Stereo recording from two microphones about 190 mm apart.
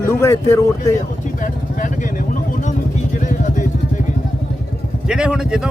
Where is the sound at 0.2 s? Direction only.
15° left (ahead or behind).